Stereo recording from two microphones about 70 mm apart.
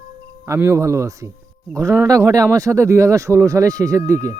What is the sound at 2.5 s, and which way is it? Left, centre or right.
A man's voice, right.